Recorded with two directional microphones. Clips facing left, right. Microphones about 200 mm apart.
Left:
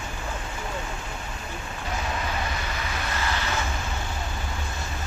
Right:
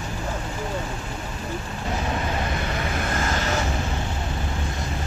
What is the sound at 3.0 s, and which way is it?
Vehicle, 45° right (ahead or behind).